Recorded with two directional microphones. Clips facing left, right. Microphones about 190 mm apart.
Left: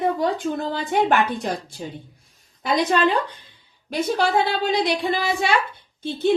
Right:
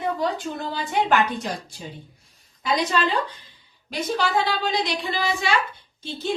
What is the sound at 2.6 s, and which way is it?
Speech, 55° left (ahead or behind).